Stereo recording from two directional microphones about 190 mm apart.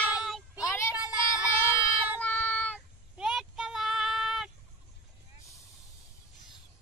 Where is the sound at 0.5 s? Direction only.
15° left (ahead or behind).